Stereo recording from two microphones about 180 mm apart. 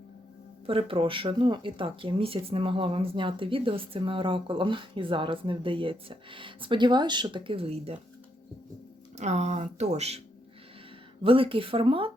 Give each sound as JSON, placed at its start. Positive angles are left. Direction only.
{"t": 0.7, "sound": "speech", "side_deg": -30}
{"t": 9.1, "sound": "speech", "side_deg": -40}
{"t": 11.2, "sound": "speech", "side_deg": -30}